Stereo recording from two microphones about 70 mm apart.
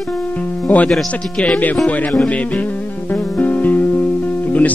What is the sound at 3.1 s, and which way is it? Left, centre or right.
Music, left.